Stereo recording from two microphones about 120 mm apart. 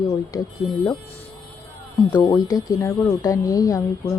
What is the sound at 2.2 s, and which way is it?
Speech, 25° left (ahead or behind).